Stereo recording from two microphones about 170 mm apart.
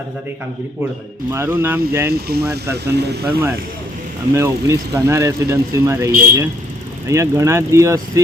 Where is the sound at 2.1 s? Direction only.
70° right (ahead or behind).